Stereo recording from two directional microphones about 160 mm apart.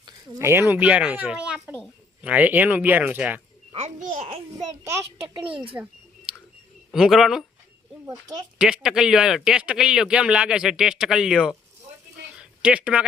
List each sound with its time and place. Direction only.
0.3 s a child's voice: 15° right (ahead or behind)
3.7 s a child's voice: 45° right (ahead or behind)
4.8 s a child's voice: 15° right (ahead or behind)
6.9 s a man's voice: centre (ahead or behind)
8.0 s speech: 25° right (ahead or behind)
8.5 s a man's voice: 5° right (ahead or behind)
12.4 s a sound: 5° right (ahead or behind)